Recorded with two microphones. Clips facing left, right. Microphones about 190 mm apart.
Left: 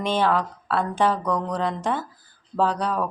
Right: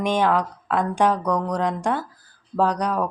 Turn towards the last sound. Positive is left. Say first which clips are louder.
# right 2 dB
turn(degrees=-15)  # may be behind; listen again after turning